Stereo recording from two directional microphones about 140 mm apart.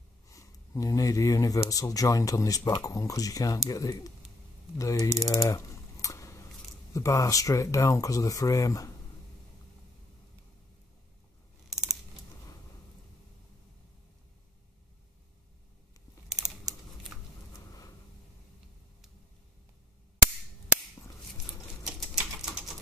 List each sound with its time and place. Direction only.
0.3 s speech: 25° left (ahead or behind)
4.7 s typing: 25° left (ahead or behind)
6.9 s speech: 20° left (ahead or behind)
16.3 s typing: 5° right (ahead or behind)
21.8 s typing: 5° right (ahead or behind)